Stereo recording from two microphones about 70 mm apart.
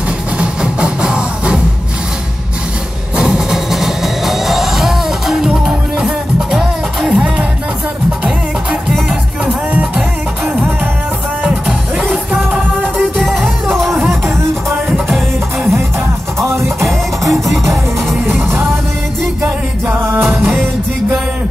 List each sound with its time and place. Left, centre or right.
0.4 s music: centre
3.2 s music: centre
11.4 s music: centre
16.3 s music: right
17.3 s music: centre
19.9 s music: right